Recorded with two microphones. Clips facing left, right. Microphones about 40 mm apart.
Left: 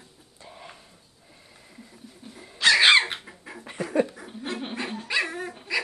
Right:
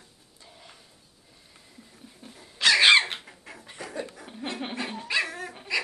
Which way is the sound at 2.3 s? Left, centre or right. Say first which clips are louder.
Left 1 dB; centre.